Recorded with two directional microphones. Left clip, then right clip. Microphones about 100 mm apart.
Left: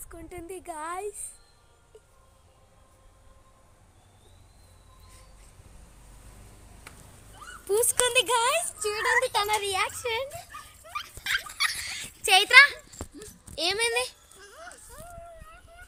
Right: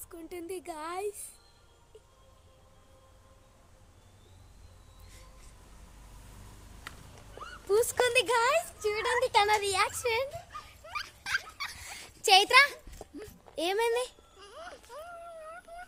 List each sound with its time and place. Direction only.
0.1 s speech: 15° right (ahead or behind)
7.7 s a woman's voice: centre (ahead or behind)
9.0 s speech: 30° left (ahead or behind)
9.3 s speech: 50° right (ahead or behind)
9.6 s speech: 25° right (ahead or behind)
10.8 s rodents: 45° right (ahead or behind)
11.2 s dog: 40° right (ahead or behind)
11.6 s dog: 60° right (ahead or behind); by 12.6 s 80° right
13.6 s a sound: 80° right; by 14.8 s 55° right (ahead or behind)